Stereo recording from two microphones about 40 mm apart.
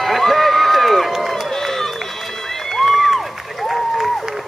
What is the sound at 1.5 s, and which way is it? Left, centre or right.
Run, centre.